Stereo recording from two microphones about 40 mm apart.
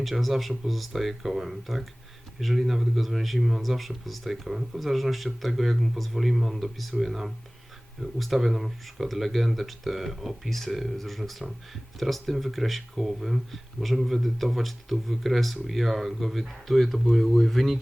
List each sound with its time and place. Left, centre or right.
0.0 s speech: centre